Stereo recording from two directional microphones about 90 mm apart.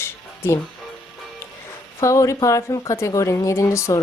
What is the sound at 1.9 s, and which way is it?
Speech, 35° left (ahead or behind).